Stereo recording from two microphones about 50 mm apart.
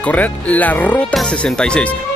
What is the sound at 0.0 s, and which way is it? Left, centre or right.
Speech, left.